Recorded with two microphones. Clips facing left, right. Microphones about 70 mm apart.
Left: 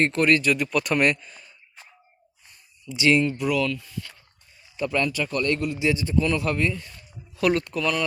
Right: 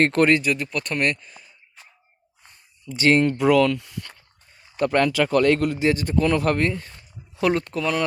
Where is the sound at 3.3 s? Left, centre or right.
Right.